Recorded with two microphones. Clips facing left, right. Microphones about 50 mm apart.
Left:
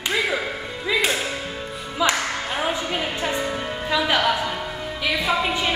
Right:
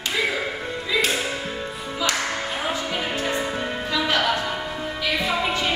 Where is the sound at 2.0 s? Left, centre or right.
Centre.